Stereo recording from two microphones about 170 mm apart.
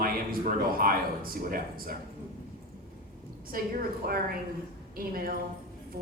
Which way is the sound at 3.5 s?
60° right (ahead or behind).